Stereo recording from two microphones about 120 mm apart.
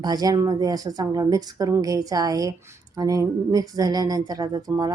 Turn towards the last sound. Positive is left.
turn(degrees=-35)  # may be behind; listen again after turning